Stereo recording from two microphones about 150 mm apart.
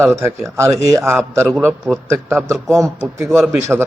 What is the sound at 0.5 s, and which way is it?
A man's voice, 20° right (ahead or behind).